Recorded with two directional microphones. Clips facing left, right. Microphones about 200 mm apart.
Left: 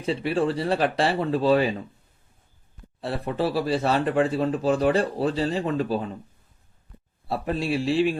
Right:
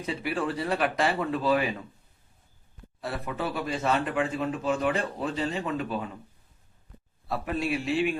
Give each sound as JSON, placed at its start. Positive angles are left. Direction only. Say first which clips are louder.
{"t": 0.0, "sound": "speech", "louder": "left 6 dB", "side_deg": 30}
{"t": 3.0, "sound": "speech", "louder": "left 6 dB", "side_deg": 30}
{"t": 7.3, "sound": "speech", "louder": "left 3 dB", "side_deg": 30}